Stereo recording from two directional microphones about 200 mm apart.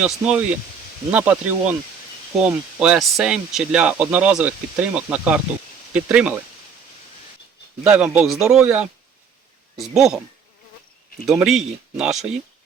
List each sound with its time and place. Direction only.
0.0 s speech: 5° right (ahead or behind)
7.9 s speech: 5° right (ahead or behind)
11.3 s speech: centre (ahead or behind)